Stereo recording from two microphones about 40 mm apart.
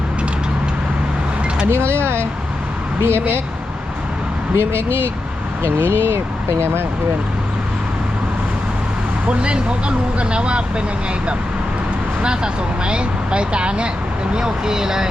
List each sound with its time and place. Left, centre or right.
1.7 s speech: right
4.5 s speech: right
9.2 s speech: right
12.2 s speech: right